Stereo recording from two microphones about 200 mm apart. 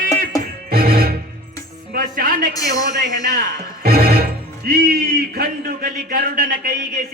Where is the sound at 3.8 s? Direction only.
50° right (ahead or behind).